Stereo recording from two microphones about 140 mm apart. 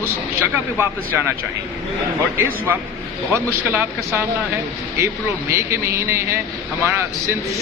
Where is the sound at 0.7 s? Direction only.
15° right (ahead or behind).